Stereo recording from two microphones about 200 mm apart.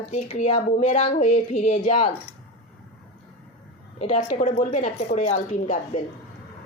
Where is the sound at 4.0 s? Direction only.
30° left (ahead or behind).